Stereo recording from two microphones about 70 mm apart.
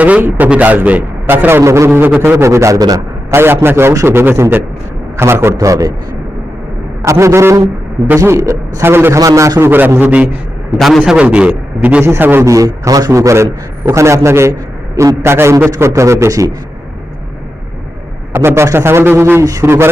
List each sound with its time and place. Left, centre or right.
0.0 s a man's voice: right
1.5 s a man's voice: right
1.9 s a man's voice: right
3.3 s a man's voice: right
7.0 s a man's voice: right
9.1 s a man's voice: right
9.6 s a man's voice: right
10.8 s a man's voice: centre
11.1 s a man's voice: centre
12.2 s a man's voice: right
12.5 s a man's voice: right
18.3 s a man's voice: right